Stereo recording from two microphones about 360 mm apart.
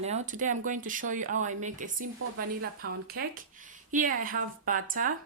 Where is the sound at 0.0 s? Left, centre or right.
Centre.